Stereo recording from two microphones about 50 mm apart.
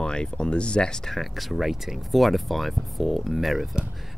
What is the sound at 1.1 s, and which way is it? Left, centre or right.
Speech, centre.